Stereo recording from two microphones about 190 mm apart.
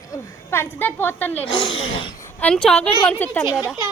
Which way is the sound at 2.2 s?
5° left (ahead or behind).